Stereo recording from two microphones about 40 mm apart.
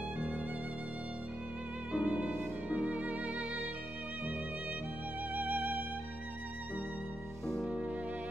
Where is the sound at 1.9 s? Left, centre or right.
Right.